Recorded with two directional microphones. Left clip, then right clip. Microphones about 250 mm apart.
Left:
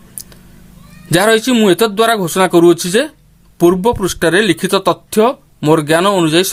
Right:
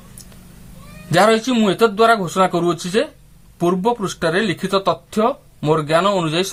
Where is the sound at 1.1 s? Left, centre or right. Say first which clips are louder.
Left 3 dB; left.